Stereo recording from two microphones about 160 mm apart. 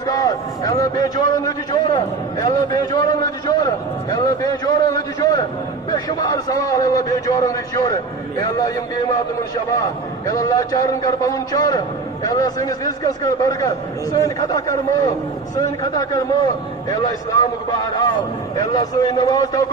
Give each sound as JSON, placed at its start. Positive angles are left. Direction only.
{"t": 0.0, "sound": "a sound", "side_deg": 20}
{"t": 5.9, "sound": "a man's voice", "side_deg": 25}
{"t": 9.8, "sound": "a man's voice", "side_deg": 20}